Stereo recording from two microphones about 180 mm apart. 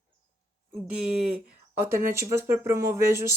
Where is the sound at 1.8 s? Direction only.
15° right (ahead or behind).